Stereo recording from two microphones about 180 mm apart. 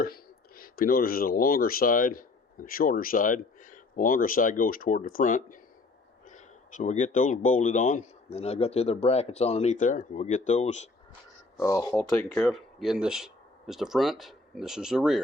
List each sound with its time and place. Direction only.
0.0 s speech: 55° left (ahead or behind)
11.6 s speech: 20° left (ahead or behind); by 15.2 s 5° right (ahead or behind)